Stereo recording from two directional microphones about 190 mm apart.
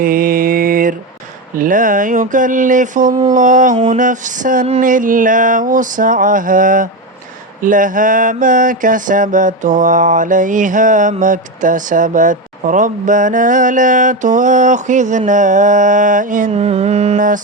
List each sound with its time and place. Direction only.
0.0 s mantra: 45° right (ahead or behind)